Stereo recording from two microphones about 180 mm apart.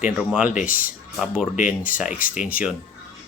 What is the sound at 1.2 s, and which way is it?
Speech, 5° right (ahead or behind).